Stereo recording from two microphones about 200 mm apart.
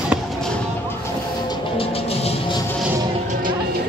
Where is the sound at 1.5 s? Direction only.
30° left (ahead or behind).